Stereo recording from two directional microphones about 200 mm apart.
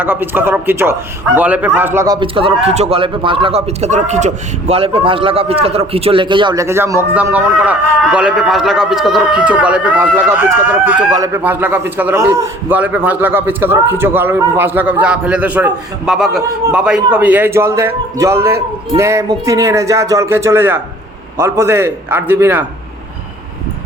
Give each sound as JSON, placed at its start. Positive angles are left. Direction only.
{"t": 0.0, "sound": "a man's voice", "side_deg": -10}